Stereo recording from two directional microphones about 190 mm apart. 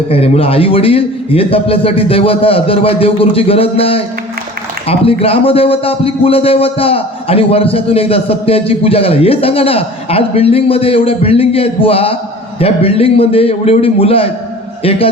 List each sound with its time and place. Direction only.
0.1 s a man's voice: 30° left (ahead or behind)